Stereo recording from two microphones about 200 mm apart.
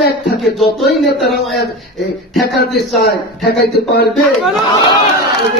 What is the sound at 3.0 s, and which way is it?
A man's voice, 50° left (ahead or behind).